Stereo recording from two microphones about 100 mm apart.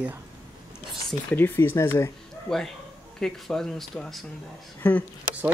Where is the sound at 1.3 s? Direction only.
20° left (ahead or behind).